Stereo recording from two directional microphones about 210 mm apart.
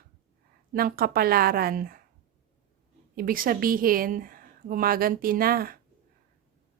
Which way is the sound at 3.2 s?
45° right (ahead or behind).